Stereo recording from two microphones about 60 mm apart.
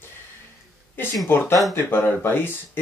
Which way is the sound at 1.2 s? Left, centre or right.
Left.